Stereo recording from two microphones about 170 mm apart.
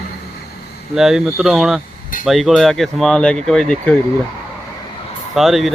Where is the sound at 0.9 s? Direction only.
5° right (ahead or behind).